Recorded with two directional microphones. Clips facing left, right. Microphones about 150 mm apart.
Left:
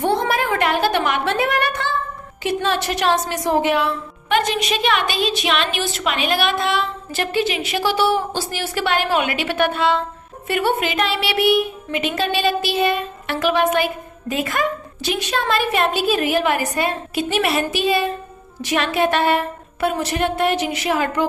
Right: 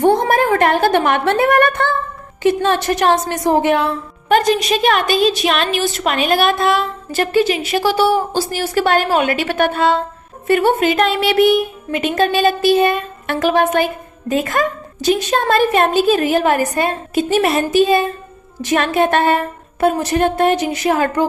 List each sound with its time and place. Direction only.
0.0 s a woman's voice: 45° right (ahead or behind)